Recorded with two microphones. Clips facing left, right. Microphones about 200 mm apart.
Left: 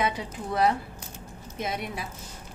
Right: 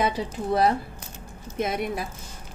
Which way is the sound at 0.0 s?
35° right (ahead or behind).